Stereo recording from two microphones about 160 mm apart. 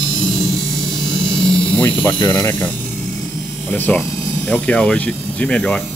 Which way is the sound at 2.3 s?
20° left (ahead or behind).